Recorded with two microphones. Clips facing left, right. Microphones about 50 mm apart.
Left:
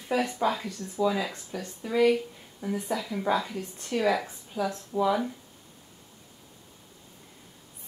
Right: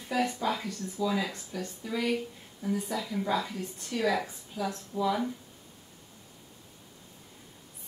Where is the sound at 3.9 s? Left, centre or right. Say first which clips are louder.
Left 3 dB; left.